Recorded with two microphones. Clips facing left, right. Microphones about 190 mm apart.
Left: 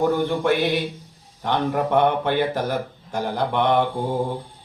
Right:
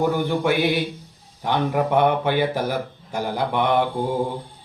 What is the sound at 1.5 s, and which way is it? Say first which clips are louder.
Mantra: right 1 dB; 5° right (ahead or behind).